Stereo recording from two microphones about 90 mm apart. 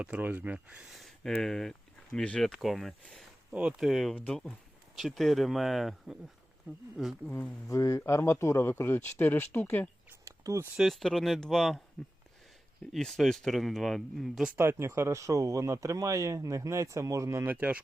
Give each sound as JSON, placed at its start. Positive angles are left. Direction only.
{"t": 0.0, "sound": "speech", "side_deg": -15}
{"t": 0.9, "sound": "a sound", "side_deg": 0}
{"t": 1.3, "sound": "speech", "side_deg": 5}
{"t": 3.5, "sound": "speech", "side_deg": -15}
{"t": 3.8, "sound": "speech", "side_deg": 0}
{"t": 4.1, "sound": "speech", "side_deg": 15}
{"t": 4.9, "sound": "speech", "side_deg": 0}
{"t": 7.3, "sound": "speech", "side_deg": 20}
{"t": 7.7, "sound": "speech", "side_deg": 35}
{"t": 10.2, "sound": "a sound", "side_deg": -35}
{"t": 10.8, "sound": "speech", "side_deg": 0}
{"t": 12.9, "sound": "speech", "side_deg": 5}
{"t": 14.5, "sound": "speech", "side_deg": -25}
{"t": 17.4, "sound": "speech", "side_deg": -20}